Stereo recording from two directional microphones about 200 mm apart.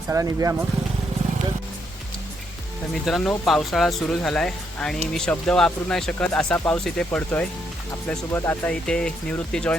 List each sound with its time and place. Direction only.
0.1 s speech: 15° right (ahead or behind)
2.9 s speech: centre (ahead or behind)